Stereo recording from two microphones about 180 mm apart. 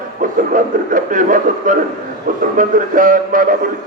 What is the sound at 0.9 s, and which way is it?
A man's voice, 45° right (ahead or behind).